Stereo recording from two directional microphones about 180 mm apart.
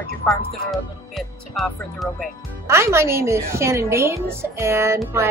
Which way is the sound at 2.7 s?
15° right (ahead or behind).